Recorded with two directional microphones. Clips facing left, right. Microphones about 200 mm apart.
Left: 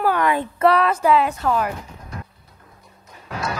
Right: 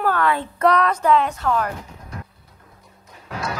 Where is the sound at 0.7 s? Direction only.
5° left (ahead or behind).